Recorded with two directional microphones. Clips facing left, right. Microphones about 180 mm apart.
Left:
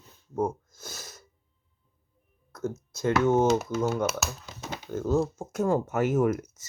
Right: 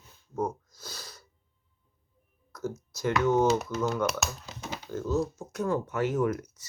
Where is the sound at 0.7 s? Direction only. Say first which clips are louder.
Left 2 dB; 50° left (ahead or behind).